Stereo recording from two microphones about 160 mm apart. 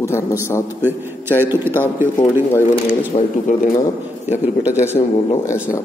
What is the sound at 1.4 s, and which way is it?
Speech, 15° right (ahead or behind).